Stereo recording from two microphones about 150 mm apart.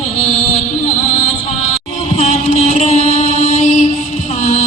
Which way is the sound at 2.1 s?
45° left (ahead or behind).